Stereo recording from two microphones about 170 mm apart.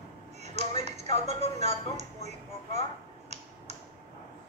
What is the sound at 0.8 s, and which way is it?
A woman's voice, 40° right (ahead or behind).